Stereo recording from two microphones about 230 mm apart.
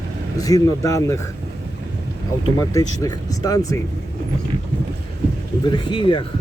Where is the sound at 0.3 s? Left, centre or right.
Centre.